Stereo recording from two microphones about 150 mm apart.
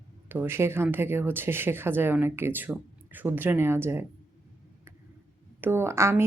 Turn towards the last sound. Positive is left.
turn(degrees=-15)  # may be behind; listen again after turning